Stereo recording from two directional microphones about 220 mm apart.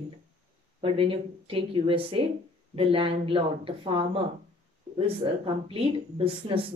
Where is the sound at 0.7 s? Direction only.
25° right (ahead or behind).